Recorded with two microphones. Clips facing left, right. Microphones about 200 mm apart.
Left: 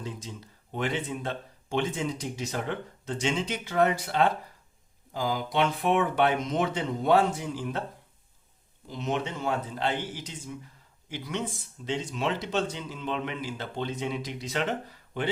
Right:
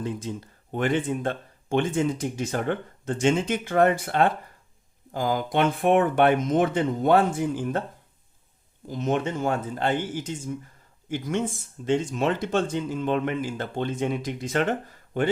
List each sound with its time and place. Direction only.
0.0 s speech: 55° right (ahead or behind)
8.9 s speech: 50° right (ahead or behind)